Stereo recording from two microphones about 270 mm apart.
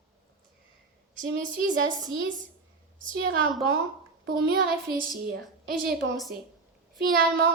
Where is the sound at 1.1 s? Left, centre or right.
Right.